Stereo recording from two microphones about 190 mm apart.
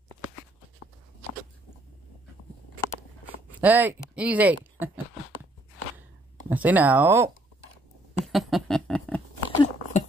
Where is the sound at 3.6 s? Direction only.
10° right (ahead or behind).